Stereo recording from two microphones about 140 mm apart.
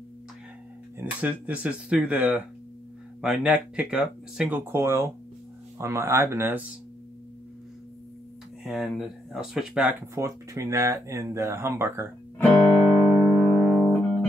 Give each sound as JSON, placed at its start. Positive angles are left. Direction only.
{"t": 0.9, "sound": "speech", "side_deg": -10}
{"t": 8.6, "sound": "speech", "side_deg": -5}
{"t": 10.1, "sound": "speech", "side_deg": -20}
{"t": 12.4, "sound": "music", "side_deg": 10}